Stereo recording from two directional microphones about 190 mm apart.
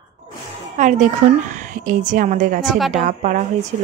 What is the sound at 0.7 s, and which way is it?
A woman's voice, 40° right (ahead or behind).